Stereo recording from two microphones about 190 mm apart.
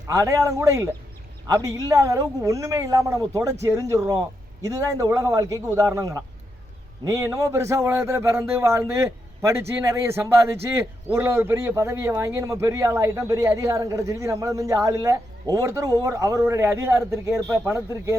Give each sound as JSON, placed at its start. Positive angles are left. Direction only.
{"t": 0.1, "sound": "a man's voice", "side_deg": -15}